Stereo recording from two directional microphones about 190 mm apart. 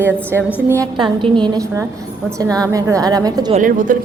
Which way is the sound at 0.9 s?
25° right (ahead or behind).